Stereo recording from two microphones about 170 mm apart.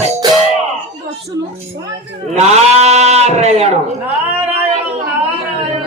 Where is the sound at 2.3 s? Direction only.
40° right (ahead or behind).